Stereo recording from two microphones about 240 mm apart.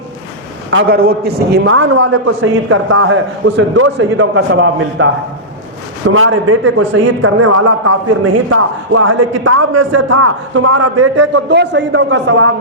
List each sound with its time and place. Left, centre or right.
0.7 s a man's voice: right
1.5 s a man's voice: right
6.1 s a man's voice: right
11.4 s a man's voice: right